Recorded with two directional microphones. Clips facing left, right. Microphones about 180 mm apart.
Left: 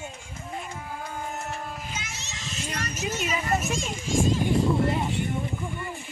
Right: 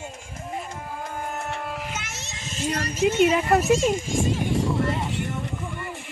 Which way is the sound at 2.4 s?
45° right (ahead or behind).